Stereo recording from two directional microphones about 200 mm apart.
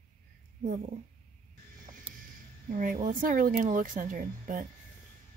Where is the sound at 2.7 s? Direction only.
45° right (ahead or behind).